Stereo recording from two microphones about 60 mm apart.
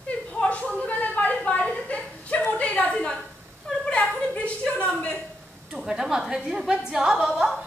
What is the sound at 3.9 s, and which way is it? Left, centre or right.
Chuckle, left.